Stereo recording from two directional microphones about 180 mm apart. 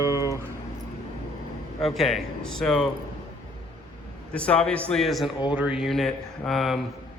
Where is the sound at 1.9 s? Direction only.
Centre (ahead or behind).